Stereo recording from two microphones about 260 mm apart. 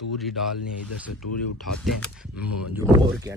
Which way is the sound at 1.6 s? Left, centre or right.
Centre.